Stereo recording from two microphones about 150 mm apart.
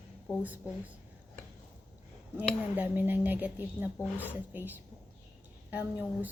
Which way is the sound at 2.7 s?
10° right (ahead or behind).